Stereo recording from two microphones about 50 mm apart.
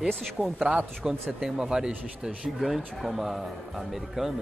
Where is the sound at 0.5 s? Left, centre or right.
Centre.